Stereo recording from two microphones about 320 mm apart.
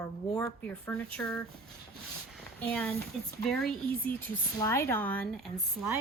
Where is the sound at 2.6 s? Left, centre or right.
Centre.